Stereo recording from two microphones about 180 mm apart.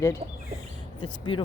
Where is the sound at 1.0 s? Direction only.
25° left (ahead or behind).